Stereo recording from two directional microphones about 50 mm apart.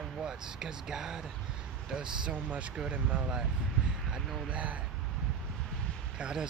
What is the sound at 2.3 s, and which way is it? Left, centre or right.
Speech, right.